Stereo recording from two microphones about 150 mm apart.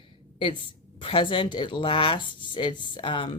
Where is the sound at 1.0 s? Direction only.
35° left (ahead or behind).